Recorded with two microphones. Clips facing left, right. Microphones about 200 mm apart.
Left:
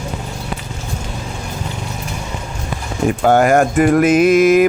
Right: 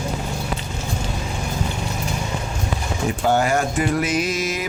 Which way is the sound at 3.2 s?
55° left (ahead or behind).